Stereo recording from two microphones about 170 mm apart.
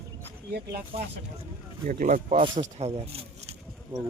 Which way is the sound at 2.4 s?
30° right (ahead or behind).